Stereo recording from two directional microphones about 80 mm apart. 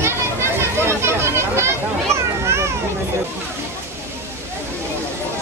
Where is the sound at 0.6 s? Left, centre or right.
Right.